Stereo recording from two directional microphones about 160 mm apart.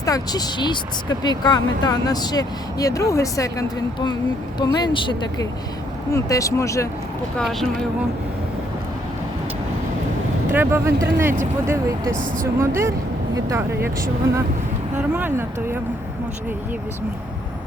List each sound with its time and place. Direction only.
0.0 s speech: 25° left (ahead or behind)
7.3 s speech: centre (ahead or behind)
10.5 s speech: 15° right (ahead or behind)
12.5 s speech: 15° right (ahead or behind)
15.1 s speech: 15° right (ahead or behind)